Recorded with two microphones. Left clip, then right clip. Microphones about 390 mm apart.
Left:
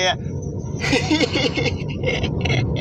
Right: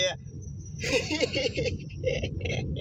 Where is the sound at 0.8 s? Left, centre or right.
Centre.